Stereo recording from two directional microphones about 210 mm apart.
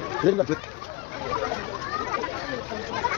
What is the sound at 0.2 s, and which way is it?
Speech, 5° right (ahead or behind).